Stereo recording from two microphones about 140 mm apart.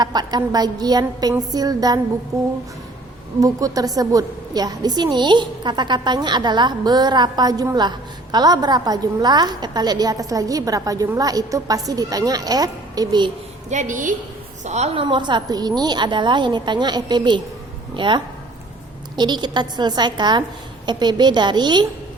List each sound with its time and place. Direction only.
0.0 s a woman's voice: 30° right (ahead or behind)
13.7 s a woman's voice: 60° right (ahead or behind)
14.6 s a woman's voice: 55° right (ahead or behind); by 21.8 s 30° right (ahead or behind)